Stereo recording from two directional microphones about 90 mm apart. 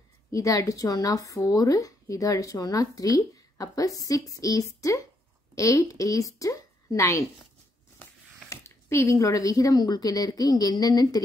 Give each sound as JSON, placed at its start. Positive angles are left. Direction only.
{"t": 0.3, "sound": "speech", "side_deg": 40}
{"t": 8.5, "sound": "speech", "side_deg": 30}